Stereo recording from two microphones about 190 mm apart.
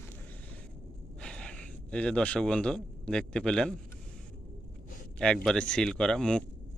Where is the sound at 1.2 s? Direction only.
5° left (ahead or behind).